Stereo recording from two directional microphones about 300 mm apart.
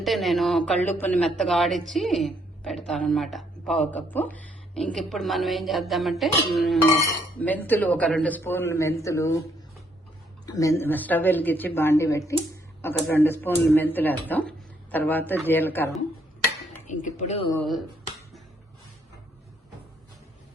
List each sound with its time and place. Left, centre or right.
0.0 s a woman's voice: centre
10.4 s speech: centre
16.8 s speech: left
17.6 s a woman's voice: centre